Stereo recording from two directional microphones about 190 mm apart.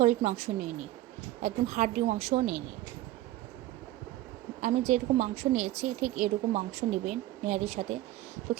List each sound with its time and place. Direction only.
0.0 s a woman's voice: 35° right (ahead or behind)
4.6 s a woman's voice: 35° right (ahead or behind)